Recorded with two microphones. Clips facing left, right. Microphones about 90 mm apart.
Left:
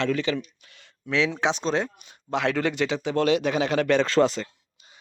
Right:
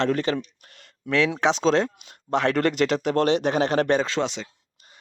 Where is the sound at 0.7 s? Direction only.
55° right (ahead or behind); by 2.2 s 75° right (ahead or behind).